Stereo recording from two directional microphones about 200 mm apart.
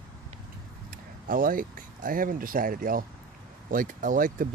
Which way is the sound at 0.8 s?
45° right (ahead or behind).